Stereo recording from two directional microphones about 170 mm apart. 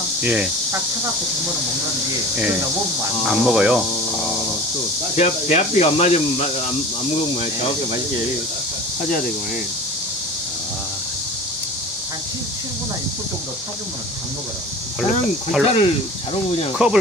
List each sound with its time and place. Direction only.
0.2 s speech: 10° right (ahead or behind)
3.3 s speech: 5° right (ahead or behind)
5.1 s speech: 40° left (ahead or behind)
15.6 s speech: 30° left (ahead or behind)
16.8 s speech: 5° right (ahead or behind)